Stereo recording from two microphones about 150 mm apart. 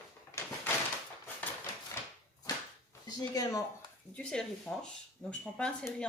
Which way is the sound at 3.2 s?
25° left (ahead or behind).